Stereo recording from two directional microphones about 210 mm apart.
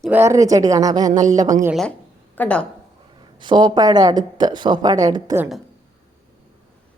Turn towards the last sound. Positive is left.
turn(degrees=-15)  # may be behind; listen again after turning